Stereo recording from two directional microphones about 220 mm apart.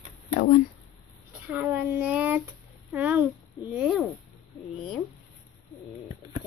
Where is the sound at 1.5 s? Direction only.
10° right (ahead or behind).